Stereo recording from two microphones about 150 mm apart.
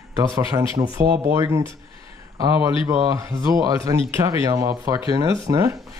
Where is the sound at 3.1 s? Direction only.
20° right (ahead or behind).